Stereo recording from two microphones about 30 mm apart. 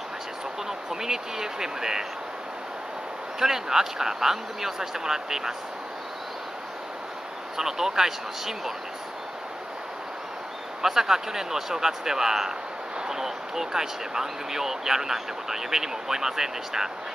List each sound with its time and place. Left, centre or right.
0.7 s speech: centre
3.3 s speech: centre
7.5 s speech: centre
10.8 s speech: centre